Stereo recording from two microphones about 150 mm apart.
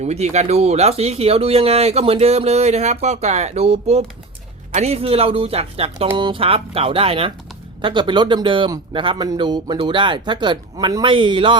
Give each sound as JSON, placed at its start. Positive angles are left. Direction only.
{"t": 0.0, "sound": "speech", "side_deg": -45}